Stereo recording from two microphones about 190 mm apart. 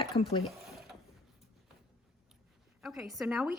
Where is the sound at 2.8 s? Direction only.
5° right (ahead or behind).